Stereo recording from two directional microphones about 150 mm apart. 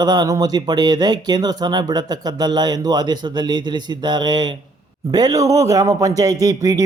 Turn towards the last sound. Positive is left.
turn(degrees=-20)  # may be behind; listen again after turning